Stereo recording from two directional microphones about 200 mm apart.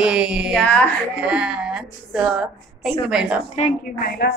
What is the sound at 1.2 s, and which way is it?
A woman's voice, 5° right (ahead or behind).